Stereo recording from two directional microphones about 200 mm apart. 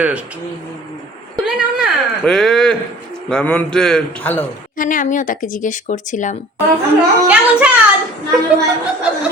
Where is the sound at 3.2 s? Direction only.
5° left (ahead or behind).